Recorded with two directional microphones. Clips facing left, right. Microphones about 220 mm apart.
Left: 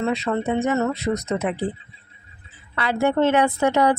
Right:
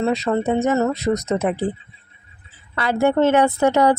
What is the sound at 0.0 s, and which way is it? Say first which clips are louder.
Speech: right 3 dB; 40° right (ahead or behind).